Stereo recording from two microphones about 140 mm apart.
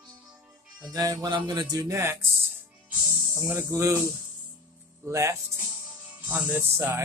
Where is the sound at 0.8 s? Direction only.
25° right (ahead or behind).